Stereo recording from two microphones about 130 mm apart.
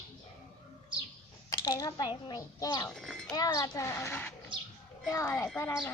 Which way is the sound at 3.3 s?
25° left (ahead or behind).